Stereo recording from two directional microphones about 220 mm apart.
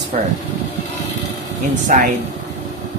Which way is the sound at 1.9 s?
35° right (ahead or behind).